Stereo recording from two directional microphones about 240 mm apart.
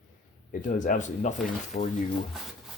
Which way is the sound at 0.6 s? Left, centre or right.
Left.